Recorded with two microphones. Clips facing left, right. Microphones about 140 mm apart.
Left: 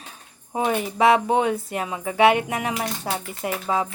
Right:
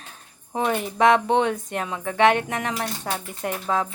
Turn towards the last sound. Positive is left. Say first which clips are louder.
# left 1 dB
turn(degrees=5)  # may be behind; listen again after turning